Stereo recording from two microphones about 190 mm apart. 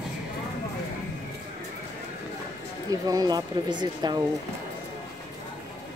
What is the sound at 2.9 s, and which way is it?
Speech, 20° right (ahead or behind).